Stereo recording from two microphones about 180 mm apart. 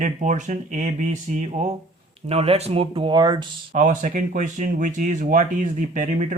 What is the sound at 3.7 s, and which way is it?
Speech, 45° right (ahead or behind).